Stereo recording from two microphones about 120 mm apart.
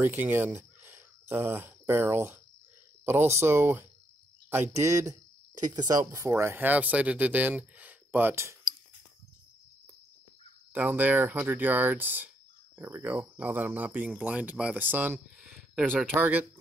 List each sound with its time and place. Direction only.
0.0 s speech: 15° right (ahead or behind)
3.3 s speech: 20° right (ahead or behind)
5.7 s speech: 30° right (ahead or behind)
10.7 s speech: 15° right (ahead or behind)
15.8 s speech: 5° left (ahead or behind)
16.2 s speech: 15° right (ahead or behind)